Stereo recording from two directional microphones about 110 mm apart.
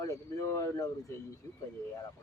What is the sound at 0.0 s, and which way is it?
Speech, 30° left (ahead or behind).